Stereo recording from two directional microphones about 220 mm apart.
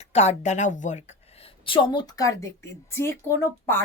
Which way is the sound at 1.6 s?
20° left (ahead or behind).